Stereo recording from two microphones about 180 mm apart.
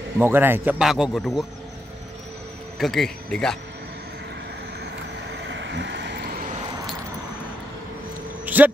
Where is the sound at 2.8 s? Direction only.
Centre (ahead or behind).